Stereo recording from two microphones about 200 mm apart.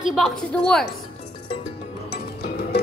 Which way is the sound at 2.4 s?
50° left (ahead or behind).